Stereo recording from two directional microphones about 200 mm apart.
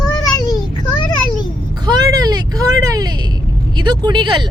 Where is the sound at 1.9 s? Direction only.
20° right (ahead or behind).